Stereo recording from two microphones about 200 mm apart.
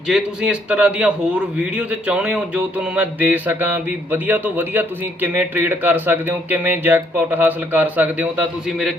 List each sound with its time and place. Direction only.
0.1 s speech: 5° right (ahead or behind)